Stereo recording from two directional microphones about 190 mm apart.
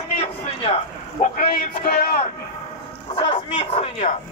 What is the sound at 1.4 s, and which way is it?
Music, 50° left (ahead or behind).